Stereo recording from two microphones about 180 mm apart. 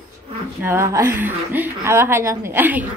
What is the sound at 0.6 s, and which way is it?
A woman's voice, 15° right (ahead or behind).